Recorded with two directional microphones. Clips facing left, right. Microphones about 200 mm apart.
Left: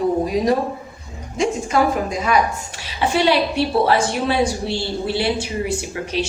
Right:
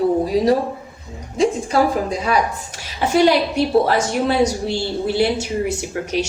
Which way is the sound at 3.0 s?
45° right (ahead or behind).